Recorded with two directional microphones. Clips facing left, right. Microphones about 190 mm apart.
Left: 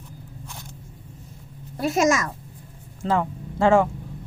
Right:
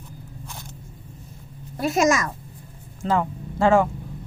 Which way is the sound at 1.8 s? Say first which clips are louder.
Even; 30° left (ahead or behind).